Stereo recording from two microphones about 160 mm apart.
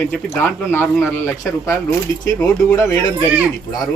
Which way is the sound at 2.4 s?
20° left (ahead or behind).